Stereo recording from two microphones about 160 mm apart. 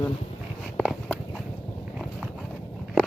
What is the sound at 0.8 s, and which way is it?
Walk, centre (ahead or behind).